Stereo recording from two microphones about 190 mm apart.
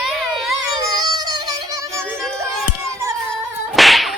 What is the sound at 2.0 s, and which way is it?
Music, 5° left (ahead or behind).